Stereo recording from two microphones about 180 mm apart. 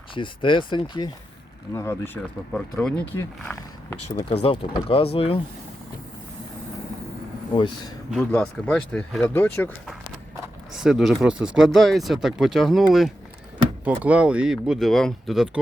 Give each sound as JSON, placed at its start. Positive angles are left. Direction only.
{"t": 0.1, "sound": "speech", "side_deg": 25}
{"t": 1.7, "sound": "speech", "side_deg": 15}
{"t": 2.5, "sound": "speech", "side_deg": 5}
{"t": 4.4, "sound": "speech", "side_deg": 30}
{"t": 8.1, "sound": "speech", "side_deg": 5}
{"t": 10.8, "sound": "speech", "side_deg": 0}